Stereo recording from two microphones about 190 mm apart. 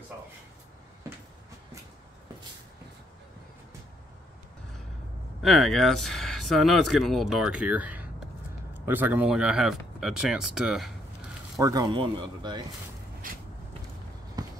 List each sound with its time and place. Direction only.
5.4 s speech: centre (ahead or behind)
11.5 s speech: 20° right (ahead or behind)
14.4 s run: 20° right (ahead or behind)